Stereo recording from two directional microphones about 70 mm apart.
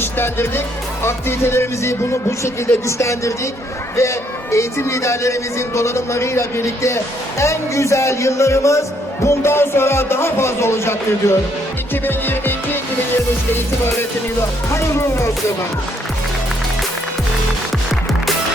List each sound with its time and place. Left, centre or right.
0.0 s speech: left
12.0 s music: left
14.7 s speech: left